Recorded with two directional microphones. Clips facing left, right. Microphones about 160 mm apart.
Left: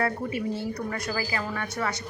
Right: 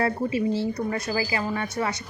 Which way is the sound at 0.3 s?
90° right.